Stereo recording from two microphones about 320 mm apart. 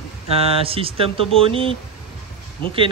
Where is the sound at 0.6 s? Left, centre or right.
Centre.